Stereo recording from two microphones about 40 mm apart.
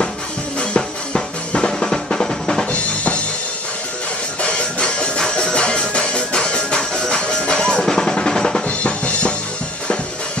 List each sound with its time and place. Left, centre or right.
0.6 s music: left
2.7 s drum kit: left
4.4 s music: left
8.6 s drum kit: left